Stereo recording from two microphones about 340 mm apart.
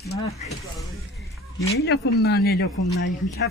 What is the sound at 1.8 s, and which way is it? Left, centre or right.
Speech, left.